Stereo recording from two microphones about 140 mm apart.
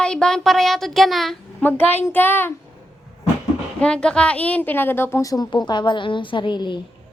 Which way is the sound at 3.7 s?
5° left (ahead or behind).